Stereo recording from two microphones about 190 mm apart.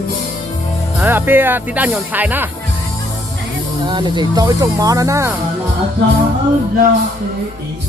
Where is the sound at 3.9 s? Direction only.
25° right (ahead or behind).